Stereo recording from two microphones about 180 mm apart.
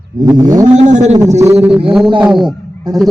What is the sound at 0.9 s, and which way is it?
Speech, 40° right (ahead or behind).